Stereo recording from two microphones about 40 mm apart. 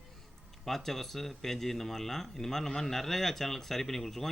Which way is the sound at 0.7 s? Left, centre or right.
Centre.